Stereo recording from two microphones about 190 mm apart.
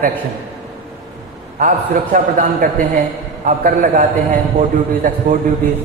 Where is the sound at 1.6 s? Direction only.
45° right (ahead or behind).